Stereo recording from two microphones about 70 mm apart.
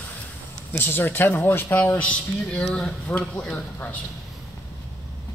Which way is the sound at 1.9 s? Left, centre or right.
Centre.